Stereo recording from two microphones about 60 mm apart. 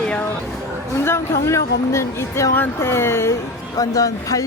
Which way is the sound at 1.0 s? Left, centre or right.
Left.